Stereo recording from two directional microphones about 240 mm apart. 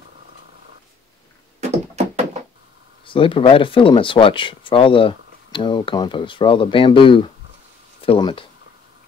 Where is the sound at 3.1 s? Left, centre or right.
Left.